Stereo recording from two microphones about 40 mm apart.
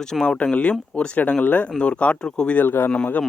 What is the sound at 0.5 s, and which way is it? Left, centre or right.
Speech, left.